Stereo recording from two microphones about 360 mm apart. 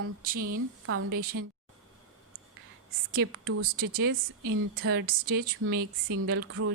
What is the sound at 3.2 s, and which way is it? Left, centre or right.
Speech, right.